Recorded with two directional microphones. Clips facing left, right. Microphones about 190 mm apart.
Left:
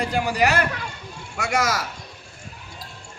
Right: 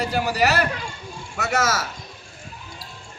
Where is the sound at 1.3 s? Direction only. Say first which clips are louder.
Even; 15° left (ahead or behind).